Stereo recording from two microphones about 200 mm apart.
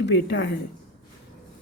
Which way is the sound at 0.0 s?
60° left (ahead or behind).